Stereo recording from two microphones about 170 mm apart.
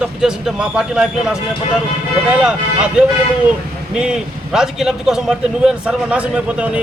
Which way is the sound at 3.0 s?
5° right (ahead or behind).